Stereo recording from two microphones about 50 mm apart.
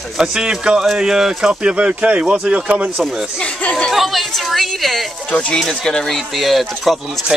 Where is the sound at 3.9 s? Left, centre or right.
Centre.